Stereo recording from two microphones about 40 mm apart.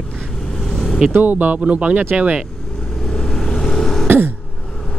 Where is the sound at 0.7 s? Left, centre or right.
Centre.